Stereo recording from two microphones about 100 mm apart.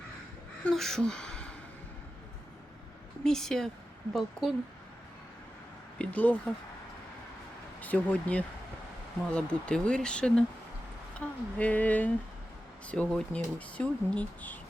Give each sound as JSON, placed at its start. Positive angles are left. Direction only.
{"t": 0.7, "sound": "gasp", "side_deg": 5}
{"t": 3.2, "sound": "speech", "side_deg": 5}
{"t": 6.0, "sound": "speech", "side_deg": 15}
{"t": 7.8, "sound": "speech", "side_deg": 15}